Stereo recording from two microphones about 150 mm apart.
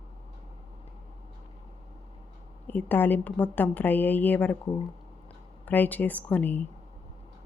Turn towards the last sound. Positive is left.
turn(degrees=10)  # may be behind; listen again after turning